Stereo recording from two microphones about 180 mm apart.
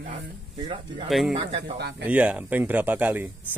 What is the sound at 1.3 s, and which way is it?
Speech, 35° right (ahead or behind).